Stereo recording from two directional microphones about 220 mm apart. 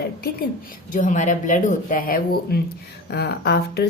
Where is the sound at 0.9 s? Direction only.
35° left (ahead or behind).